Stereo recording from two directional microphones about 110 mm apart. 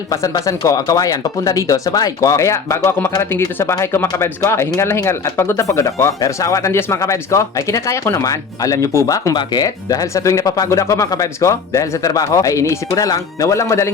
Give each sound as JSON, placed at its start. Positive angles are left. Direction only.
{"t": 0.1, "sound": "speech", "side_deg": 30}